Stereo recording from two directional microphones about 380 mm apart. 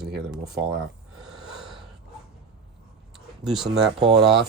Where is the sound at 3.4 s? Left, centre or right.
Centre.